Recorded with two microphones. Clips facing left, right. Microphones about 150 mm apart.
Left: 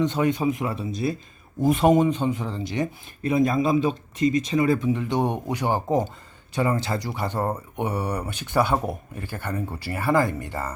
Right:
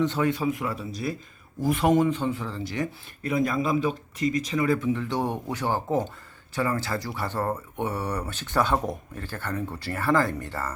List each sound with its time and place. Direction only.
0.0 s speech: 15° left (ahead or behind)